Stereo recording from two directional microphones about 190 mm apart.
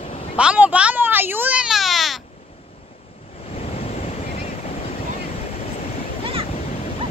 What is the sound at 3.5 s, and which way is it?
Waves, 30° left (ahead or behind).